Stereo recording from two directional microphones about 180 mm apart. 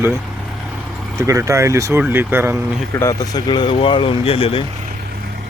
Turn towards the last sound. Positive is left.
turn(degrees=30)  # may be behind; listen again after turning